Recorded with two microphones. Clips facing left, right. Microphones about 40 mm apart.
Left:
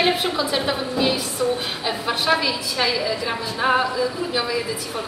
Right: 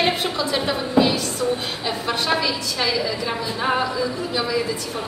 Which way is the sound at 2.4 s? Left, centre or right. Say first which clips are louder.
Left 1 dB; centre.